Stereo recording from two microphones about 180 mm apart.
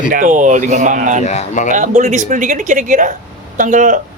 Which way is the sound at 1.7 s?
45° right (ahead or behind).